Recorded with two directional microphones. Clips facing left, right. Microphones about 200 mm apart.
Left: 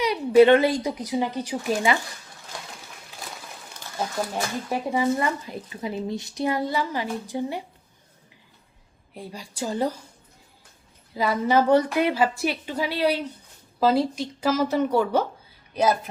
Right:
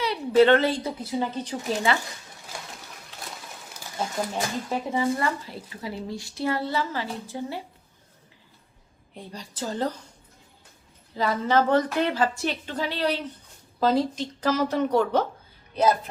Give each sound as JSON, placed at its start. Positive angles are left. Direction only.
{"t": 0.0, "sound": "speech", "side_deg": 15}
{"t": 4.7, "sound": "speech", "side_deg": 15}
{"t": 9.1, "sound": "speech", "side_deg": 10}
{"t": 11.1, "sound": "speech", "side_deg": 10}